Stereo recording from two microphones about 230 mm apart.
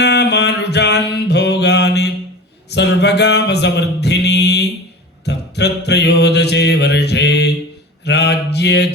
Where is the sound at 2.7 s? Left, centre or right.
Left.